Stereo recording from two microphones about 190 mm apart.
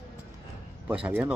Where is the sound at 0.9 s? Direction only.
5° right (ahead or behind).